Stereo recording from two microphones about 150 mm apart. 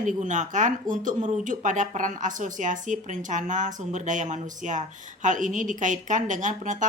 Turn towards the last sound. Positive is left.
turn(degrees=-55)  # may be behind; listen again after turning